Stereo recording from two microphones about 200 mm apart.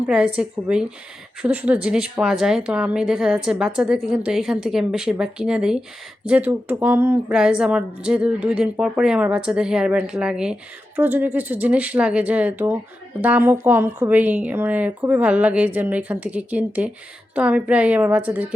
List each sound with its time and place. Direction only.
0.1 s a woman's voice: 5° right (ahead or behind)